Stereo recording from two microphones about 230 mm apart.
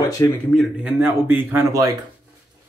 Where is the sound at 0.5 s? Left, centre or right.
Centre.